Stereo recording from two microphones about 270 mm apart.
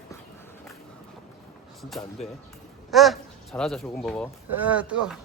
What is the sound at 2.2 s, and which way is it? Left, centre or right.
Speech, left.